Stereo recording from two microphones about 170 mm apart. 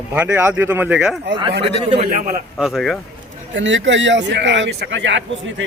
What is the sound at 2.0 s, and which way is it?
Speech, 50° right (ahead or behind).